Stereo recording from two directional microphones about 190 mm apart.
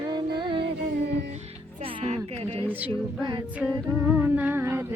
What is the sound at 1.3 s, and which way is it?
Music, 30° right (ahead or behind).